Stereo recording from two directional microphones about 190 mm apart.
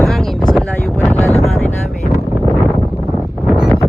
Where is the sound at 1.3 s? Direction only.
35° left (ahead or behind).